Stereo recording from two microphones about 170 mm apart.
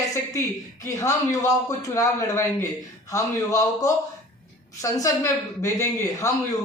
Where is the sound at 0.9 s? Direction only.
20° left (ahead or behind).